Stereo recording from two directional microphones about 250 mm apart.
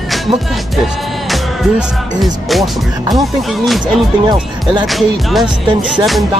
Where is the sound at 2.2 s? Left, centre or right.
Centre.